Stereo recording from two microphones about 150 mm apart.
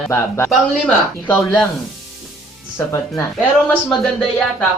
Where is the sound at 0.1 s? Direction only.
15° left (ahead or behind).